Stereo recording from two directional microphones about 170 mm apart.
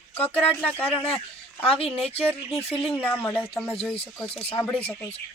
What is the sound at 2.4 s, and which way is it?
Speech, 35° left (ahead or behind).